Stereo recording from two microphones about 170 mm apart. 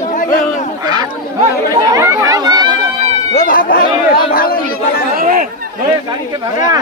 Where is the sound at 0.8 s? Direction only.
25° right (ahead or behind).